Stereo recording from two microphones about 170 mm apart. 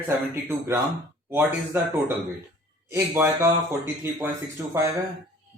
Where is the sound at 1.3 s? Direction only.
10° right (ahead or behind).